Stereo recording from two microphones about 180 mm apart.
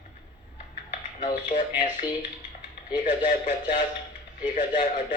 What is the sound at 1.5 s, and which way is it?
Speech, 45° left (ahead or behind).